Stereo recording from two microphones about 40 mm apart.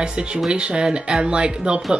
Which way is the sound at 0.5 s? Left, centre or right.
Right.